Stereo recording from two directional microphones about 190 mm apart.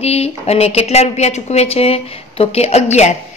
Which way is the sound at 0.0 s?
35° left (ahead or behind).